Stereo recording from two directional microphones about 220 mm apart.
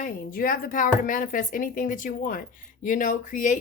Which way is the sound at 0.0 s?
40° left (ahead or behind).